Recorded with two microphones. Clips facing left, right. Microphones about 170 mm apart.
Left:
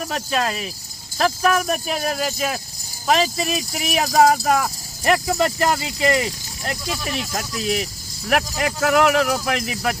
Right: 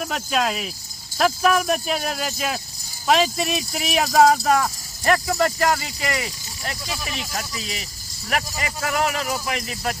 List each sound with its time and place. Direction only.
0.1 s speech: centre (ahead or behind)
5.0 s speech: 15° left (ahead or behind)
7.6 s speech: 55° left (ahead or behind)